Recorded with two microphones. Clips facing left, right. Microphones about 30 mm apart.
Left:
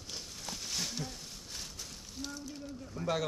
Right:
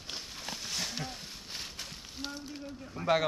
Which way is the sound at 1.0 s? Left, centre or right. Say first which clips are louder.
Right 2 dB; right.